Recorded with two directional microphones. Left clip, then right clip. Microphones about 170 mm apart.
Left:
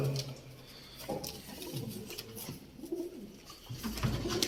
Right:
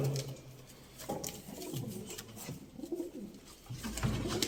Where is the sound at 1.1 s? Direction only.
15° left (ahead or behind).